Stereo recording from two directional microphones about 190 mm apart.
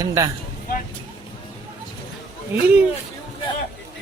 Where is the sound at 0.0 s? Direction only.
15° right (ahead or behind).